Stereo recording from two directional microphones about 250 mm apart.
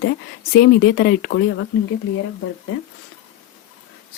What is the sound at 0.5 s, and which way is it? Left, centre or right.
Speech, left.